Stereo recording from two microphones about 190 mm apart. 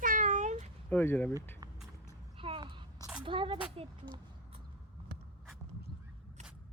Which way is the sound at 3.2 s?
25° right (ahead or behind).